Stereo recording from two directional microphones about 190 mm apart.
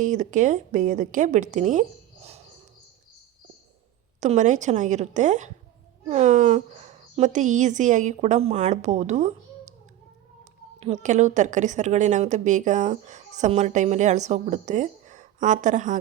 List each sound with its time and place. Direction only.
0.0 s a woman's voice: 40° right (ahead or behind)
2.2 s cricket: 35° right (ahead or behind)
4.2 s a woman's voice: 40° right (ahead or behind)
10.8 s a woman's voice: 35° right (ahead or behind)